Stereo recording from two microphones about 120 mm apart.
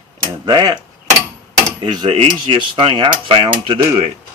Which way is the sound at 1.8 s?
50° right (ahead or behind).